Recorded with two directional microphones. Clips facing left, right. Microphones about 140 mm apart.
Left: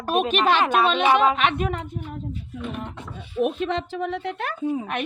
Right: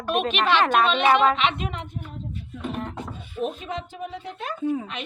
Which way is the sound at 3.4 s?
70° left (ahead or behind).